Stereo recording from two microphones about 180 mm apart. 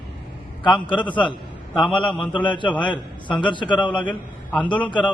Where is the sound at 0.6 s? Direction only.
25° left (ahead or behind).